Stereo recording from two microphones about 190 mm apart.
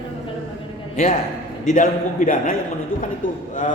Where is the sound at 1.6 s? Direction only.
45° left (ahead or behind).